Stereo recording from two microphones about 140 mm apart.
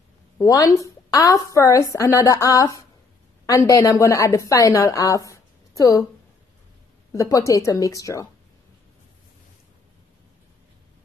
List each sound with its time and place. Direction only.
0.4 s a woman's voice: 25° left (ahead or behind)
7.1 s a woman's voice: 25° left (ahead or behind)